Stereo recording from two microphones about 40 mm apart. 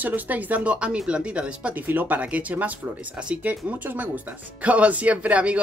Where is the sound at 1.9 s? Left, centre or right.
Right.